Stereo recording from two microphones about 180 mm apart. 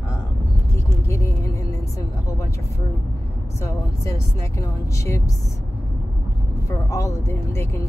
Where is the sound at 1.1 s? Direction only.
15° left (ahead or behind).